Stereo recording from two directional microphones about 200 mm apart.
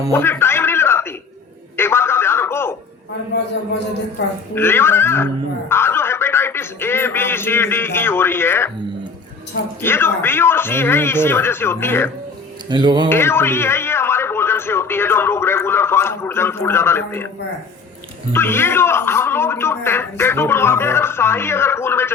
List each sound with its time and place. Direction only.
0.1 s a sound: 10° left (ahead or behind)
1.7 s telephone: 10° left (ahead or behind)
4.5 s a man's voice: 10° left (ahead or behind)
9.8 s a man's voice: 10° left (ahead or behind)
12.6 s speech: 20° right (ahead or behind)
13.1 s a man's voice: 10° left (ahead or behind)
18.3 s a man's voice: 10° left (ahead or behind)